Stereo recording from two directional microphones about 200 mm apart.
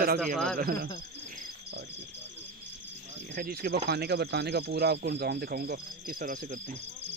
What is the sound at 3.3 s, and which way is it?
Speech, 50° right (ahead or behind).